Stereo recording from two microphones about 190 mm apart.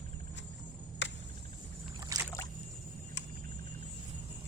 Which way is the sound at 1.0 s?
70° left (ahead or behind).